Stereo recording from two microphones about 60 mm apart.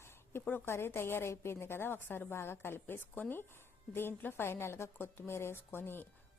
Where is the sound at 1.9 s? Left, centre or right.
Left.